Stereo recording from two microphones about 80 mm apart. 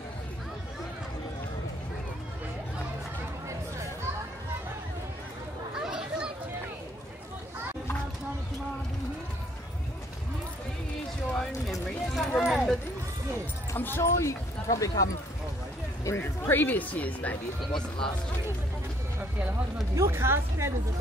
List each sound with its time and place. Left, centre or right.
3.4 s chatter: right
5.8 s chatter: centre
11.3 s a sound: centre
13.7 s speech: left
16.5 s speech: left
17.7 s speech: left
20.0 s speech: right